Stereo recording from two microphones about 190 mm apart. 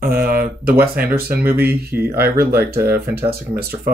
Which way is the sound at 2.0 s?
10° right (ahead or behind).